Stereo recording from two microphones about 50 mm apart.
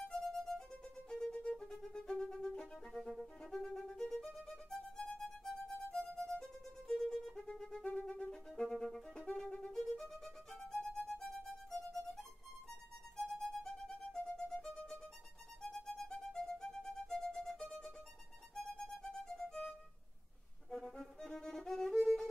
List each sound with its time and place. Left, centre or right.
0.1 s music: centre
2.9 s violin: centre
5.0 s music: centre
6.1 s violin: centre
7.4 s music: centre
7.8 s music: left
8.3 s music: centre
9.1 s music: centre
9.8 s violin: centre
19.0 s music: centre
20.7 s violin: centre